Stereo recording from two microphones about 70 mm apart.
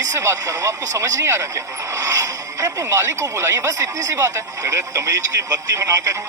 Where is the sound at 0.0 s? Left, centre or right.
Right.